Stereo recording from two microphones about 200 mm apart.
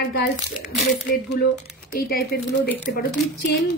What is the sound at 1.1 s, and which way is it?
A woman's voice, 55° left (ahead or behind).